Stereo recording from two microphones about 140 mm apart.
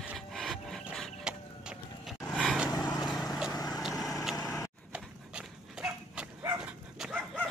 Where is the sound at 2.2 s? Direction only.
5° left (ahead or behind).